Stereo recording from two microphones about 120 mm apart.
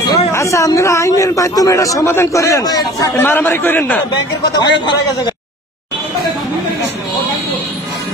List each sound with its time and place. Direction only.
0.3 s a man's voice: 25° left (ahead or behind)
4.6 s a man's voice: 40° left (ahead or behind)